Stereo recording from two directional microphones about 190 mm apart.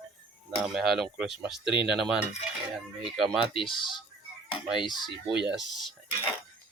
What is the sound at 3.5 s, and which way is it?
Speech, 25° left (ahead or behind).